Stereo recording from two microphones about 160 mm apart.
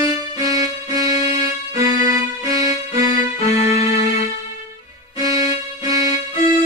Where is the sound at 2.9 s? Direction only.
20° right (ahead or behind).